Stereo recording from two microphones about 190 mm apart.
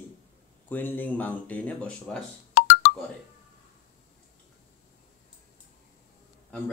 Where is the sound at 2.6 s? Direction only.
65° left (ahead or behind).